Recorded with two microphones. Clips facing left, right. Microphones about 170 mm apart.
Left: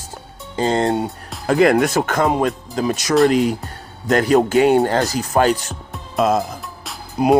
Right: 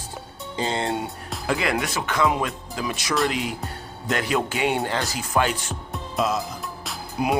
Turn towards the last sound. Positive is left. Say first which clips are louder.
# left 8 dB
turn(degrees=35)  # may be behind; listen again after turning